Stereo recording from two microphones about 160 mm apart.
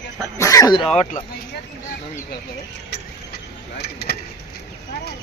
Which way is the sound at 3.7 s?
90° left.